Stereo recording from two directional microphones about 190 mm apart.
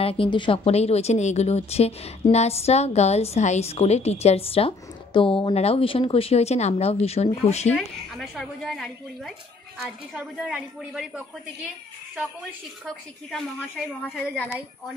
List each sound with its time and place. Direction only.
0.0 s a woman's voice: 30° left (ahead or behind)
7.7 s a woman's voice: centre (ahead or behind)
14.0 s a woman's voice: 5° left (ahead or behind)